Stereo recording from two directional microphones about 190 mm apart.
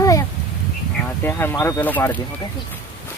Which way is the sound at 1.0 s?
10° left (ahead or behind).